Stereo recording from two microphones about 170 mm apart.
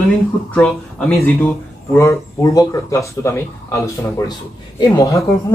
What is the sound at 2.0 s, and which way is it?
Speech, 20° left (ahead or behind).